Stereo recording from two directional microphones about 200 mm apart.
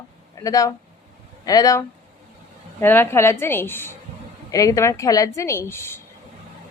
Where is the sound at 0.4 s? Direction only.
15° left (ahead or behind).